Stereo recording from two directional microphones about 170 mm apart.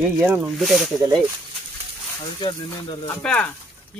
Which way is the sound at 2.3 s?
25° left (ahead or behind).